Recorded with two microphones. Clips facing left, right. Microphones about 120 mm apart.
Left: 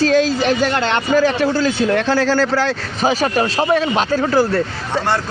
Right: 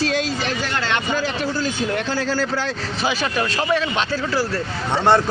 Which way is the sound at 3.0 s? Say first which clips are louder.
Left 6 dB; 40° left (ahead or behind).